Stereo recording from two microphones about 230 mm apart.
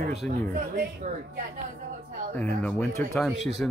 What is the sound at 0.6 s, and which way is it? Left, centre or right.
Speech, right.